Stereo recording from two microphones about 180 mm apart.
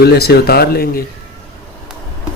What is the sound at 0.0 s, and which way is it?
Speech, 65° left (ahead or behind).